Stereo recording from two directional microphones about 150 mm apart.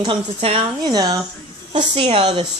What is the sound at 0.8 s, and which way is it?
Speech, 25° right (ahead or behind).